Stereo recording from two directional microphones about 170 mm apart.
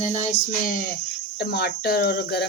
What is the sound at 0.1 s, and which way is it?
Speech, 50° left (ahead or behind).